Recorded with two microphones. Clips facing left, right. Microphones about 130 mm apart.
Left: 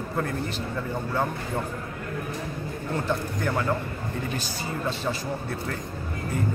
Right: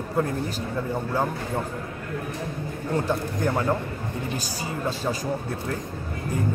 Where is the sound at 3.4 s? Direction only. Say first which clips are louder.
Right 2 dB; 20° right (ahead or behind).